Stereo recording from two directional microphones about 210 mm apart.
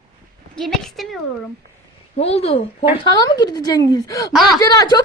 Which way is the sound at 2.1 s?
30° left (ahead or behind).